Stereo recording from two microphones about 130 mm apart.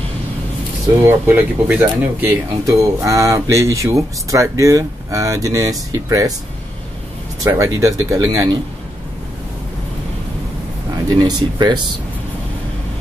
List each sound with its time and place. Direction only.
1.0 s speech: 15° right (ahead or behind)
7.4 s speech: 25° right (ahead or behind)
11.1 s speech: 30° right (ahead or behind)